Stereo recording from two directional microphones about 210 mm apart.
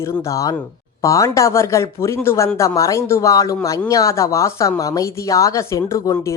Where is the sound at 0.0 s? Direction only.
15° left (ahead or behind).